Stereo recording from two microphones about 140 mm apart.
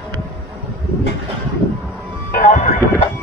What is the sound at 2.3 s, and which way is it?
Music, 65° left (ahead or behind).